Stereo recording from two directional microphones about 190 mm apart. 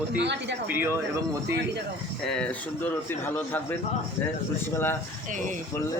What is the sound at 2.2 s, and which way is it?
A man's voice, 5° left (ahead or behind).